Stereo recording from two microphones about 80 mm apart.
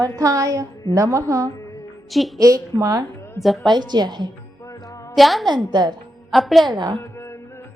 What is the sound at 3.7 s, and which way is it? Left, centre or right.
Music, right.